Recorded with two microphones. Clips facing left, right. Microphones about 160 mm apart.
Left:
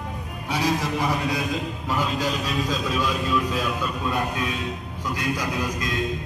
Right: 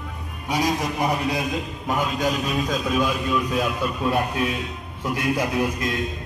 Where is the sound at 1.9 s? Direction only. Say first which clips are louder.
Right 2 dB; 45° right (ahead or behind).